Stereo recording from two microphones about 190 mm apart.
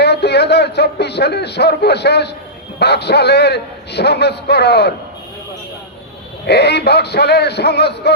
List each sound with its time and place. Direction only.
0.0 s a man's voice: 60° left (ahead or behind)
6.4 s a man's voice: 60° left (ahead or behind)